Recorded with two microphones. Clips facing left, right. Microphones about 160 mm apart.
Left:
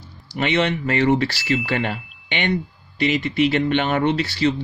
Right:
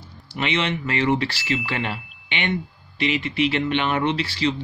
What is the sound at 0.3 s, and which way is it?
Speech, 40° left (ahead or behind).